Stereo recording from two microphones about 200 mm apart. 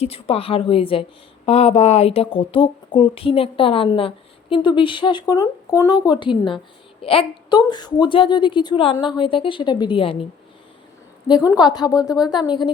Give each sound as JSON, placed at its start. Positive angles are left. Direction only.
{"t": 0.0, "sound": "speech", "side_deg": 30}
{"t": 11.5, "sound": "speech", "side_deg": 20}